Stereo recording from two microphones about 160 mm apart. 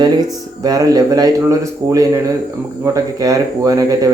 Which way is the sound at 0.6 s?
25° right (ahead or behind).